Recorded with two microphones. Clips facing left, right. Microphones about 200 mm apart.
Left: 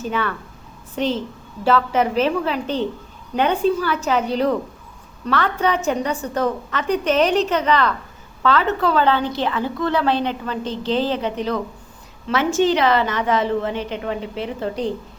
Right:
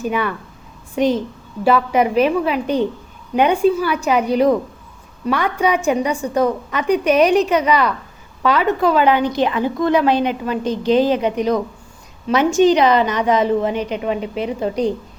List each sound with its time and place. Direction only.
0.0 s a woman's voice: 15° right (ahead or behind)